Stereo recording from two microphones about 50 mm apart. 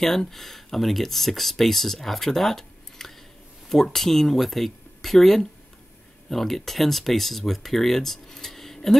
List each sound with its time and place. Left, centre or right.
0.0 s speech: centre